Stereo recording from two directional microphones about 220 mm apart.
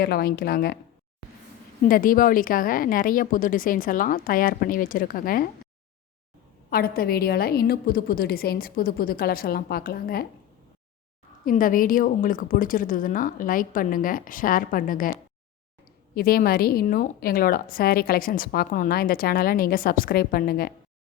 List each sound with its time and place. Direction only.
0.0 s a woman's voice: 45° left (ahead or behind)
1.9 s a woman's voice: 40° left (ahead or behind)
6.7 s a woman's voice: 45° left (ahead or behind)
11.4 s a woman's voice: 40° left (ahead or behind)